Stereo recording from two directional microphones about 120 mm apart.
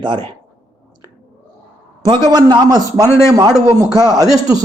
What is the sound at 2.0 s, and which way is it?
A man's voice, 35° right (ahead or behind).